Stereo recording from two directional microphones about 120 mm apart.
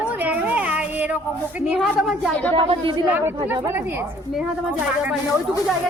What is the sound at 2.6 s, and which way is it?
Speech, 50° right (ahead or behind).